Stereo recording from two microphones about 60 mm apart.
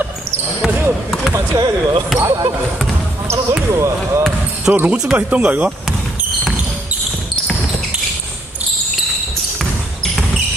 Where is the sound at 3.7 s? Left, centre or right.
Right.